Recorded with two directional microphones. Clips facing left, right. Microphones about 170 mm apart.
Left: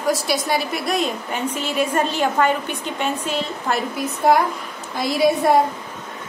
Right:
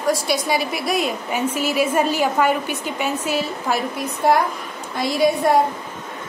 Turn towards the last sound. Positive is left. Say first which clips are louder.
# even
turn(degrees=0)  # may be behind; listen again after turning